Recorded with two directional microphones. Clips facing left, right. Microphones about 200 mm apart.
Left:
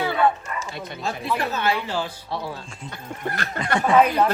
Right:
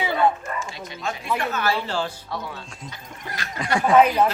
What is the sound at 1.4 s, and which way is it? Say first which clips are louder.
Speech: even; 30° left (ahead or behind).